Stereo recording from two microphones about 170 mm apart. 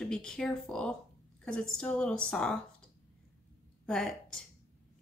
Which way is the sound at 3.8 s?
Centre (ahead or behind).